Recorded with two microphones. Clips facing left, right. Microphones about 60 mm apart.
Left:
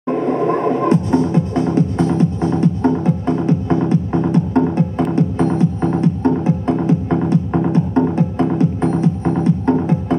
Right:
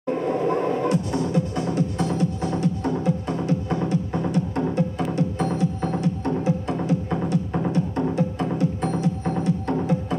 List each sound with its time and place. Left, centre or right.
0.1 s music: left